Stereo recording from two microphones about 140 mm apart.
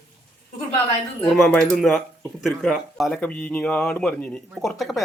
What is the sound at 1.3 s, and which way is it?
A man's voice, 5° left (ahead or behind).